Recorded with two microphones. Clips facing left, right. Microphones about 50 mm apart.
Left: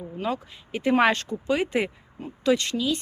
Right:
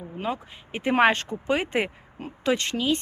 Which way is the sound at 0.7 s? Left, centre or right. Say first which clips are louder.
Even; right.